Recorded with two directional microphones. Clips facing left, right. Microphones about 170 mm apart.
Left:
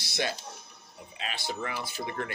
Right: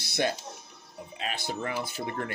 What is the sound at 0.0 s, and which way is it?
Music, 45° right (ahead or behind).